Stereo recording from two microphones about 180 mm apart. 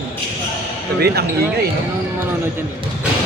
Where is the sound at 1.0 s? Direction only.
65° right (ahead or behind).